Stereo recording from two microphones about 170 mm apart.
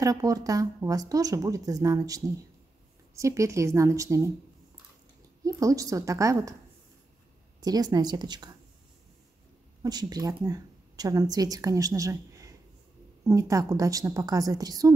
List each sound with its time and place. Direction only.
0.0 s a woman's voice: 20° right (ahead or behind)
5.4 s a woman's voice: 20° right (ahead or behind)
7.6 s a woman's voice: 25° right (ahead or behind)
9.8 s a woman's voice: 25° right (ahead or behind)